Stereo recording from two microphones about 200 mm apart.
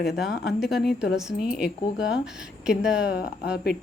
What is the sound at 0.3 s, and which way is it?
Speech, 50° left (ahead or behind).